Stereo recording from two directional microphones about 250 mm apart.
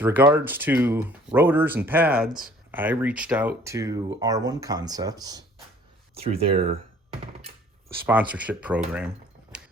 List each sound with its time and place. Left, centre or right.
0.0 s speech: centre; by 6.6 s right
8.0 s speech: centre